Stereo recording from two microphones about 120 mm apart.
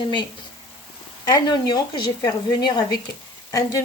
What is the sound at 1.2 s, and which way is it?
A woman's voice, 35° left (ahead or behind).